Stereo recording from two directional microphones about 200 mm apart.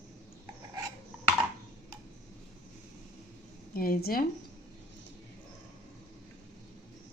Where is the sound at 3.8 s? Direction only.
45° left (ahead or behind).